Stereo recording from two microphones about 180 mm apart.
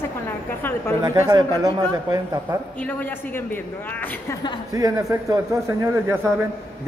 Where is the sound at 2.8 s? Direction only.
10° left (ahead or behind).